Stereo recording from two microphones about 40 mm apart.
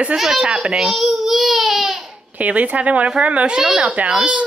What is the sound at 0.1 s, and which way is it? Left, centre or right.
A child's voice, centre.